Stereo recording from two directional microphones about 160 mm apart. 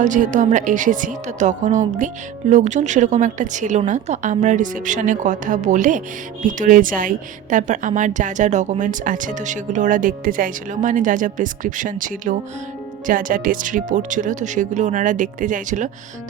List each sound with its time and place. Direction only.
0.0 s a woman's voice: 50° right (ahead or behind)